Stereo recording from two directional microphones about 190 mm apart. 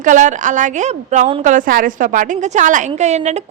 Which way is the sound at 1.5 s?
45° right (ahead or behind).